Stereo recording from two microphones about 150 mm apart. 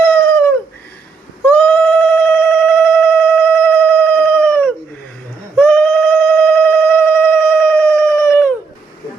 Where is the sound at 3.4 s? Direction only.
10° left (ahead or behind).